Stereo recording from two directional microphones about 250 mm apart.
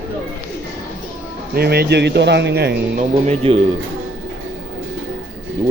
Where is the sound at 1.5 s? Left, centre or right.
Right.